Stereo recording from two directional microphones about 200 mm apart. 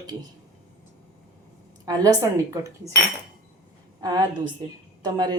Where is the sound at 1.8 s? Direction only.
20° right (ahead or behind).